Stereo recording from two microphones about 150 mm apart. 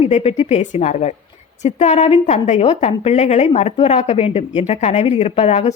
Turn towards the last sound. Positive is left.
turn(degrees=50)  # may be behind; listen again after turning